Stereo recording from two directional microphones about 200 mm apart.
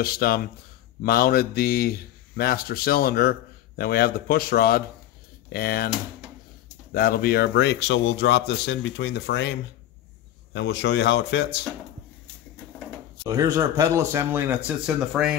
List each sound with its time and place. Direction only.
0.0 s a man's voice: 50° left (ahead or behind)
6.9 s a man's voice: 50° left (ahead or behind)
13.3 s speech: 15° right (ahead or behind)